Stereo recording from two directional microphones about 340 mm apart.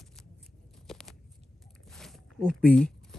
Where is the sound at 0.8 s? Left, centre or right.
Centre.